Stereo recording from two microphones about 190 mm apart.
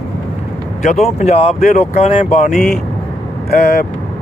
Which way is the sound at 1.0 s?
35° left (ahead or behind).